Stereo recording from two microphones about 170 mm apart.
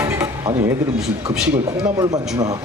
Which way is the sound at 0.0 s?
20° right (ahead or behind).